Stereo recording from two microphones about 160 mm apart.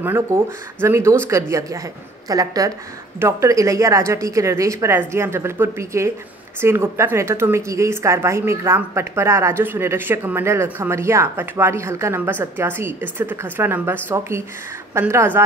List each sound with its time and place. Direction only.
0.0 s a woman's voice: 15° right (ahead or behind)